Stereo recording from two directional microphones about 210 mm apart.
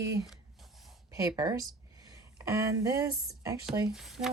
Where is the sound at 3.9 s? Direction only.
Centre (ahead or behind).